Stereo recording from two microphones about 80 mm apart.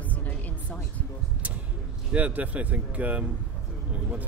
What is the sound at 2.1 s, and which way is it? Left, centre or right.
Speech, centre.